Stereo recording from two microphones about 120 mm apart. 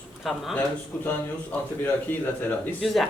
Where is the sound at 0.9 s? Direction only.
15° left (ahead or behind).